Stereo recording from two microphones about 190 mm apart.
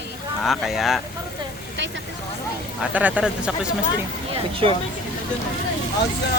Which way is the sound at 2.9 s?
5° right (ahead or behind).